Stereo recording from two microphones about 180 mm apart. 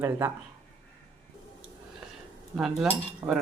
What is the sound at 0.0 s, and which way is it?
Speech, 15° right (ahead or behind).